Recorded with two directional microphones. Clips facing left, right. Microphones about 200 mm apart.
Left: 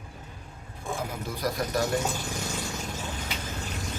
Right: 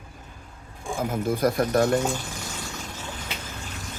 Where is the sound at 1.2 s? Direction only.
50° right (ahead or behind).